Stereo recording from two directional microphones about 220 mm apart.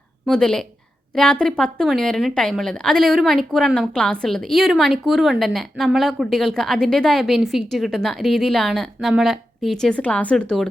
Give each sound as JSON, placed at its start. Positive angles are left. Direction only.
{"t": 0.3, "sound": "a woman's voice", "side_deg": 5}